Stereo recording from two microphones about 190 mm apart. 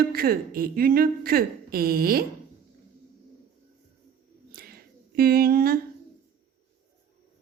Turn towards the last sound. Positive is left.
turn(degrees=-50)  # may be behind; listen again after turning